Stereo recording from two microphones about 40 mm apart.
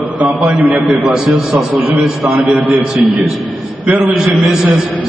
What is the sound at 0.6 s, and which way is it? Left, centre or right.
A man's voice, right.